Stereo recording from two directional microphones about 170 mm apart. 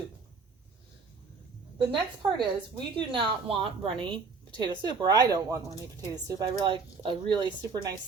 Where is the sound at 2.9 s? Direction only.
30° right (ahead or behind).